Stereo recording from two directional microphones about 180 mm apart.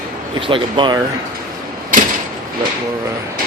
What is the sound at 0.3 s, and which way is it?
Speech, 30° right (ahead or behind).